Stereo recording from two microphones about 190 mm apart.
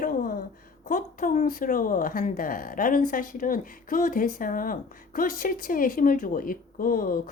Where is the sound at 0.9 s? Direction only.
45° left (ahead or behind).